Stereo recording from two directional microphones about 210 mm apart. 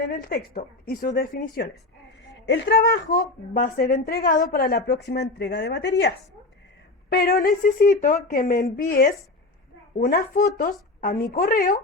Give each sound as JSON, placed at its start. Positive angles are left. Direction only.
{"t": 0.1, "sound": "a woman's voice", "side_deg": 45}